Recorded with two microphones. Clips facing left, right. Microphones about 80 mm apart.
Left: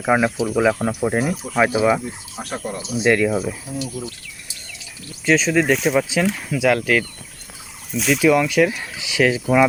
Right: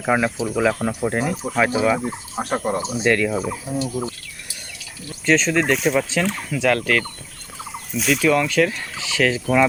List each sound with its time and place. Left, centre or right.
0.0 s fowl: centre
2.0 s speech: right
3.0 s fowl: centre
3.7 s speech: right
5.2 s speech: centre
7.9 s fowl: centre